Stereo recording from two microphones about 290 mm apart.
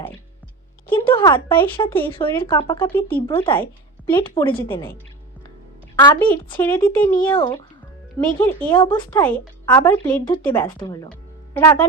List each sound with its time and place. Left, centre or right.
0.9 s speech: centre
2.0 s a woman's voice: centre
3.3 s a woman's voice: centre
3.6 s a woman's voice: centre
6.0 s a woman's voice: centre